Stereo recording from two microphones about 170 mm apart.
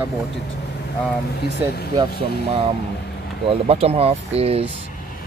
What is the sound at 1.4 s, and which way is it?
Speech, 70° left (ahead or behind).